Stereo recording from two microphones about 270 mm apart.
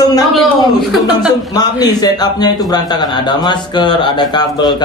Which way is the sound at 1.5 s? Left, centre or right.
Centre.